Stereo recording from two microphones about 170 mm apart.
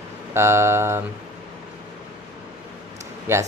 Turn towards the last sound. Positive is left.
turn(degrees=-15)  # may be behind; listen again after turning